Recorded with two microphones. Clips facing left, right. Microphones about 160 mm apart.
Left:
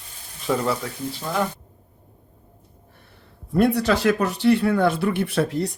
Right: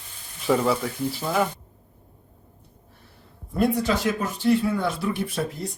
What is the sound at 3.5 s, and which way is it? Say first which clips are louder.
Speech: left 3 dB; 70° left (ahead or behind).